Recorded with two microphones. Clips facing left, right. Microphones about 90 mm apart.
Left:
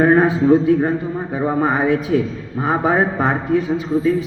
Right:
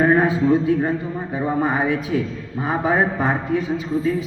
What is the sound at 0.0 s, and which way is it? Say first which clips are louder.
Speech: left 3 dB; 55° left (ahead or behind).